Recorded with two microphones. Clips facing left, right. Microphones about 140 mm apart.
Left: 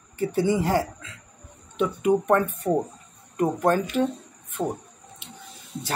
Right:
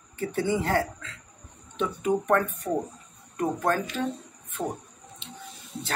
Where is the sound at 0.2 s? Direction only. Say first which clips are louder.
Left 4 dB; 10° left (ahead or behind).